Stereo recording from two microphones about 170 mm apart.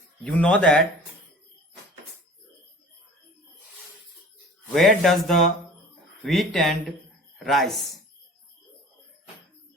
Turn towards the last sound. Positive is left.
turn(degrees=0)  # may be behind; listen again after turning